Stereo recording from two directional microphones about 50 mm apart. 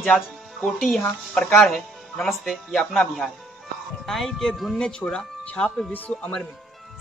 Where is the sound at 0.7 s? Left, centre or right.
Centre.